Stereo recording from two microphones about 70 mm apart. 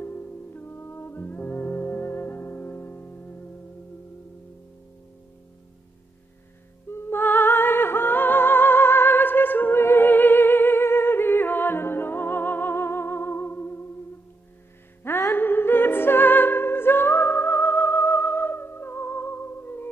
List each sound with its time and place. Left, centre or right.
0.0 s music: left
6.9 s music: left
15.3 s music: left